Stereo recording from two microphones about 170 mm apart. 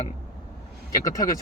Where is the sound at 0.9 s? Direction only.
20° left (ahead or behind).